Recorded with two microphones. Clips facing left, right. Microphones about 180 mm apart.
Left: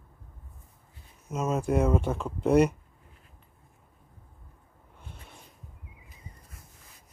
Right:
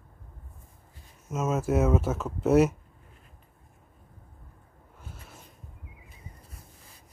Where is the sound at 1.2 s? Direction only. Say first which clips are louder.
Right 1 dB; centre (ahead or behind).